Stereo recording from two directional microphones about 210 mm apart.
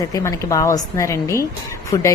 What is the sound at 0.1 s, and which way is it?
A woman's voice, 15° left (ahead or behind).